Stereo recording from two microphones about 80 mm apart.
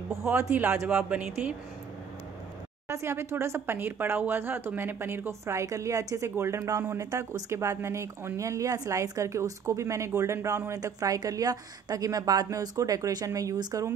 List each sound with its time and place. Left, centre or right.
0.1 s a man's voice: right
0.5 s speech: centre
2.9 s speech: right
6.3 s speech: right